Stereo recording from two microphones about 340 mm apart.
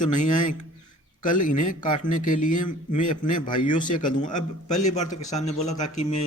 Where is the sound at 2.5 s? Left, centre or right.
Left.